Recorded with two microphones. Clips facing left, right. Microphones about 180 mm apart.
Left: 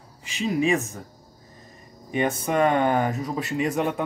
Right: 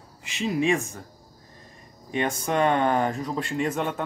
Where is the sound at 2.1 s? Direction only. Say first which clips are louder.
Left 2 dB; 5° left (ahead or behind).